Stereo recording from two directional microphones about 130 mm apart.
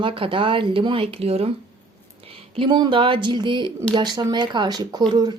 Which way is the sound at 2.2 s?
40° right (ahead or behind).